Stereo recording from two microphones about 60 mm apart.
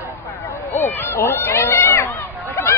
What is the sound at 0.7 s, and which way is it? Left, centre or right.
Run, left.